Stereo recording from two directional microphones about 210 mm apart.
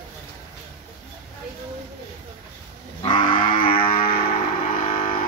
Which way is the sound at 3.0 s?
25° left (ahead or behind).